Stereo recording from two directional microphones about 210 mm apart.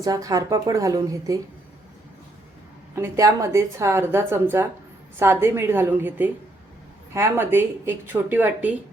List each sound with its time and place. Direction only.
0.0 s a woman's voice: 15° right (ahead or behind)
2.9 s a woman's voice: 15° right (ahead or behind)